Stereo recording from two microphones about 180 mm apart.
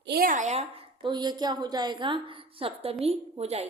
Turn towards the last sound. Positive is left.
turn(degrees=-35)  # may be behind; listen again after turning